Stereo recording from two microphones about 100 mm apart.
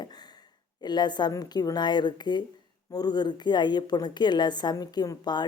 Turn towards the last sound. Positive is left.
turn(degrees=45)  # may be behind; listen again after turning